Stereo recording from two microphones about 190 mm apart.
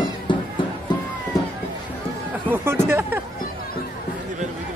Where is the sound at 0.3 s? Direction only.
25° left (ahead or behind).